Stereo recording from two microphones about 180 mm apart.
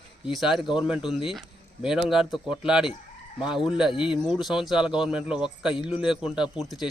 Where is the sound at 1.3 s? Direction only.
5° right (ahead or behind).